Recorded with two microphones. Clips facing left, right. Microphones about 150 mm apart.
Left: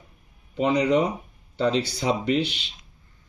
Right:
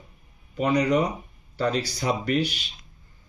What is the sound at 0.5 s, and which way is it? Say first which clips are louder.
Speech: left 1 dB; 25° left (ahead or behind).